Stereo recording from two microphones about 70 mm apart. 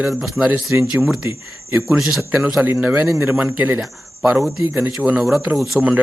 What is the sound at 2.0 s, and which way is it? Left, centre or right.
Speech, centre.